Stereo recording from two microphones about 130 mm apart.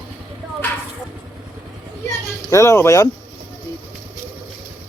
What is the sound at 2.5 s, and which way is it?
Speech, 20° left (ahead or behind).